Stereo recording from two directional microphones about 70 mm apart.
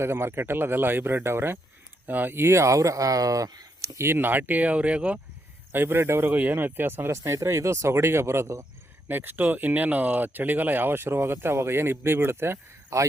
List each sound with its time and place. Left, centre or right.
0.0 s speech: right; by 5.2 s centre
5.7 s speech: right
9.0 s speech: right